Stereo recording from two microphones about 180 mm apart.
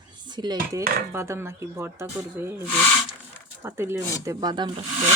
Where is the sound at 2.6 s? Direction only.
10° left (ahead or behind).